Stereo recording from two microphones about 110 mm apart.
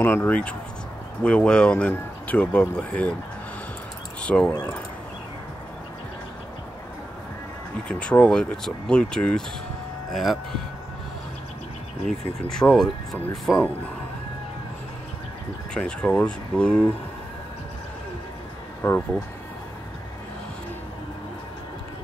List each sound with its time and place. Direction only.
0.0 s speech: 15° left (ahead or behind)
4.2 s speech: 10° left (ahead or behind)
7.9 s speech: 10° left (ahead or behind)
12.1 s speech: 5° left (ahead or behind)
15.7 s speech: 10° left (ahead or behind)
18.8 s speech: 20° left (ahead or behind)